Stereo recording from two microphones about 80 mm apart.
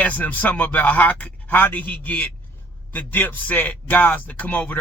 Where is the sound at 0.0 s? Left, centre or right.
Left.